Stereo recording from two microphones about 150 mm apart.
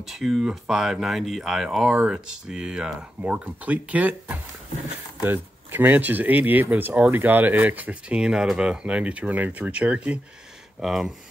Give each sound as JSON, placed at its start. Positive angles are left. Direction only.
{"t": 0.0, "sound": "speech", "side_deg": 0}